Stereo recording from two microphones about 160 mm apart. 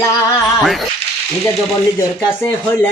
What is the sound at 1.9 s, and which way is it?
Speech, 15° left (ahead or behind).